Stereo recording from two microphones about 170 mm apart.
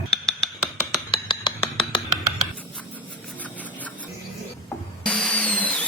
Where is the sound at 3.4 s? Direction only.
10° left (ahead or behind).